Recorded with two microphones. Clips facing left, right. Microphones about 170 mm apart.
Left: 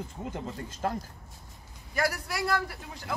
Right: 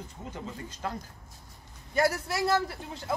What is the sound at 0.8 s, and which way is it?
Speech, 45° left (ahead or behind).